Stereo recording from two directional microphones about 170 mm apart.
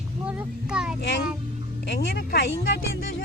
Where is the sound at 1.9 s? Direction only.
80° left.